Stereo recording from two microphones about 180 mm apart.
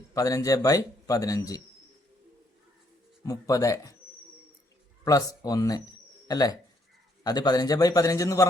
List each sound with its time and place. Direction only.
0.1 s a man's voice: 20° left (ahead or behind)
3.2 s a man's voice: 20° left (ahead or behind)
5.0 s a man's voice: 20° left (ahead or behind)